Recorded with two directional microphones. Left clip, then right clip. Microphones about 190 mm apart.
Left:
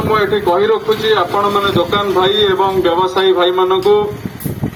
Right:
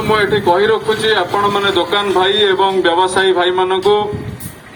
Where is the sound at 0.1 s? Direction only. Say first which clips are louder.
Right 1 dB; 20° right (ahead or behind).